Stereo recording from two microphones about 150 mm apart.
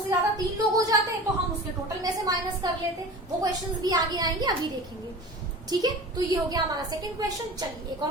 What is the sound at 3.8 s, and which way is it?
Speech, 25° right (ahead or behind).